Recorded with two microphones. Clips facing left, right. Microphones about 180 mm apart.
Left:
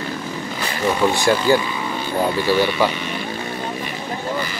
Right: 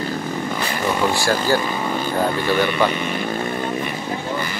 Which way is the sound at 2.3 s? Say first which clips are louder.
Left 1 dB; 50° right (ahead or behind).